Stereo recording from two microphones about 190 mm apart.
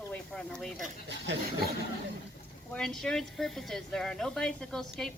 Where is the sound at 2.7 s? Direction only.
5° left (ahead or behind).